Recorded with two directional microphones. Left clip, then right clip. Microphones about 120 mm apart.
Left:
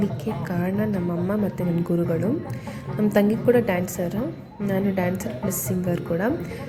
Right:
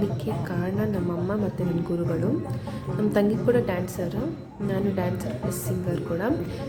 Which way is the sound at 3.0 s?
15° left (ahead or behind).